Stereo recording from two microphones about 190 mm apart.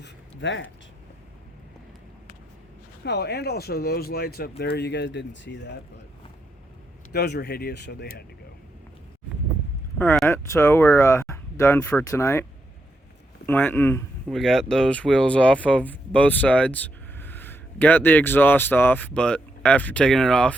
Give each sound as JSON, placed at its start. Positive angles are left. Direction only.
{"t": 0.0, "sound": "a sound", "side_deg": 75}
{"t": 3.0, "sound": "speech", "side_deg": 60}
{"t": 7.1, "sound": "speech", "side_deg": 60}
{"t": 10.0, "sound": "speech", "side_deg": 10}
{"t": 13.5, "sound": "speech", "side_deg": 10}
{"t": 14.3, "sound": "speech", "side_deg": 0}